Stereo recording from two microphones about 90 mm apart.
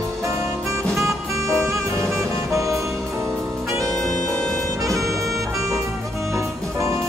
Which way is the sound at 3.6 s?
35° right (ahead or behind).